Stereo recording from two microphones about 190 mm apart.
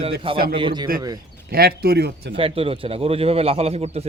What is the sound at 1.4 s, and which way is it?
Speech, 55° right (ahead or behind).